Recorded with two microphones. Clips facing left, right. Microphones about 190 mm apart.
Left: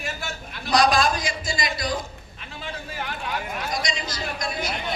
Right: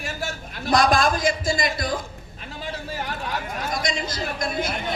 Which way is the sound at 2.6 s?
40° right (ahead or behind).